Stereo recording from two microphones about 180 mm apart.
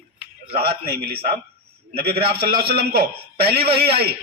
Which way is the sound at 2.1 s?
30° right (ahead or behind).